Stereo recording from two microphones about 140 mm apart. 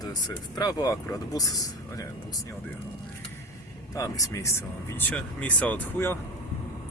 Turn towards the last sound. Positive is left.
turn(degrees=15)  # may be behind; listen again after turning